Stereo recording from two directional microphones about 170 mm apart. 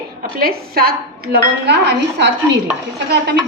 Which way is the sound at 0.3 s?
60° right (ahead or behind).